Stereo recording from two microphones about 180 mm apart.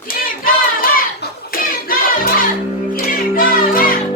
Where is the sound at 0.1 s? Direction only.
50° left (ahead or behind).